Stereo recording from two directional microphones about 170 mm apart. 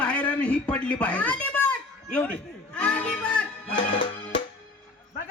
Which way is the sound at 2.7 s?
5° left (ahead or behind).